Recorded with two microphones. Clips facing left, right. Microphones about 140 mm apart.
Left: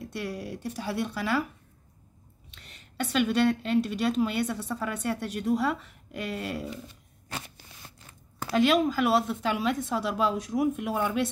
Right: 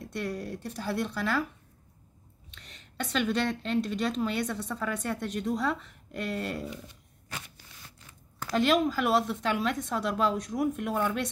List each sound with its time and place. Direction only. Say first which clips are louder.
0.1 s a woman's voice: right 2 dB; 5° left (ahead or behind)
2.5 s a woman's voice: left 1 dB; 5° left (ahead or behind)
7.2 s a sound: left 4 dB; 35° left (ahead or behind)
8.4 s a woman's voice: left 2 dB; 5° left (ahead or behind)